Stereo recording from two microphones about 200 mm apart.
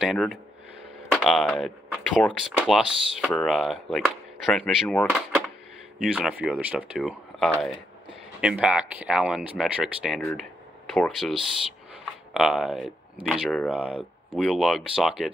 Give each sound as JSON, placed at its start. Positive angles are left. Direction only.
{"t": 0.0, "sound": "speech", "side_deg": 0}
{"t": 6.1, "sound": "speech", "side_deg": -5}